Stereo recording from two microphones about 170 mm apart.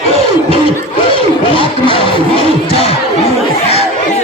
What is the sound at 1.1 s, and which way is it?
Music, 30° left (ahead or behind).